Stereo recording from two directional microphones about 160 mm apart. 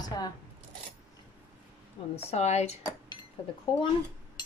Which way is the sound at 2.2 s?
40° left (ahead or behind).